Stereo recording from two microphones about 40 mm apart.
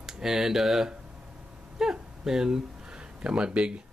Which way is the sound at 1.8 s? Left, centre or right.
Centre.